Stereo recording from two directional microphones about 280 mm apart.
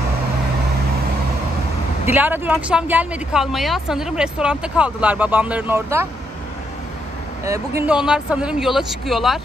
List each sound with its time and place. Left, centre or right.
2.0 s speech: centre
7.4 s speech: centre